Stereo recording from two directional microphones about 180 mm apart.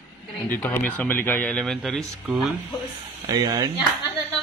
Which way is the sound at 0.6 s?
10° left (ahead or behind).